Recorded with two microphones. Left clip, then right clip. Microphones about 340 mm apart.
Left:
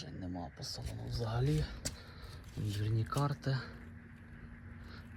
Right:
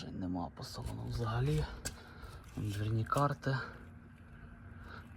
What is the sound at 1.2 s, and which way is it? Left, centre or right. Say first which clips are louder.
Speech: right 1 dB; right.